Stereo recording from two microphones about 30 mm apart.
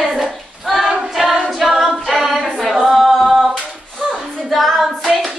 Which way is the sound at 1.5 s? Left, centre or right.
Centre.